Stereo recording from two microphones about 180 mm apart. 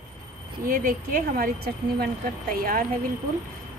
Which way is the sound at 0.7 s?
50° right (ahead or behind).